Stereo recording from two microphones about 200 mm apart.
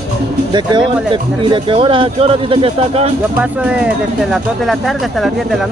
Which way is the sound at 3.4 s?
5° right (ahead or behind).